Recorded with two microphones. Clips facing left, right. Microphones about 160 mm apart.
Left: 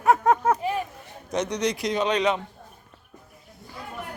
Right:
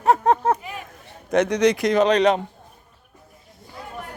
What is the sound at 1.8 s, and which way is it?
Speech, 45° right (ahead or behind).